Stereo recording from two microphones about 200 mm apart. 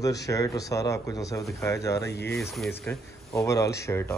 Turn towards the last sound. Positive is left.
turn(degrees=10)  # may be behind; listen again after turning